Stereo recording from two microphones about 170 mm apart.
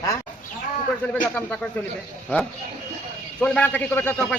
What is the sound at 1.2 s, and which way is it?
Speech, 5° left (ahead or behind).